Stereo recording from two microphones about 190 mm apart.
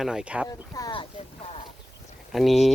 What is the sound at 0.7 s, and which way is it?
Speech, 20° left (ahead or behind).